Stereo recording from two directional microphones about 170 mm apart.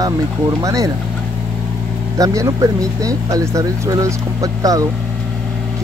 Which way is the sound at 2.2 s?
20° right (ahead or behind).